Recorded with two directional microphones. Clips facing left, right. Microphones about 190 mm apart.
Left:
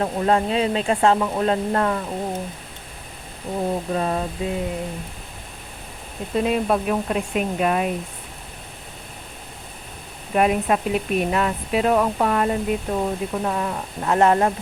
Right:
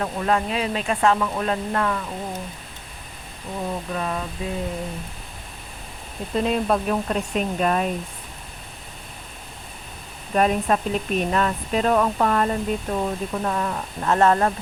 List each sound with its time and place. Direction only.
0.0 s speech: 30° left (ahead or behind)
3.6 s speech: 35° left (ahead or behind)
6.3 s speech: 10° left (ahead or behind)
10.3 s speech: 10° left (ahead or behind)